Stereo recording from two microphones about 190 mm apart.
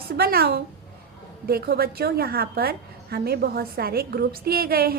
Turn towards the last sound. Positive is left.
turn(degrees=-50)  # may be behind; listen again after turning